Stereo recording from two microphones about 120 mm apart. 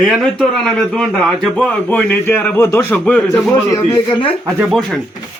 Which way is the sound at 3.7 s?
30° left (ahead or behind).